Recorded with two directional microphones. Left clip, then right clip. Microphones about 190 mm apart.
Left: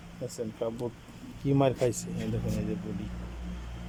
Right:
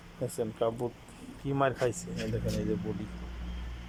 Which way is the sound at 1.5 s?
25° left (ahead or behind).